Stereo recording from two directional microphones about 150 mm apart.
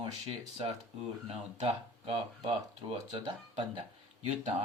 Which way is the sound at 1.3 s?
45° right (ahead or behind).